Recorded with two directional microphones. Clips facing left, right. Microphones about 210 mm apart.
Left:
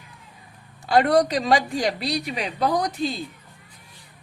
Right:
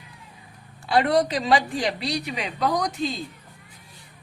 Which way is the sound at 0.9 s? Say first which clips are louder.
Left 2 dB; 45° left (ahead or behind).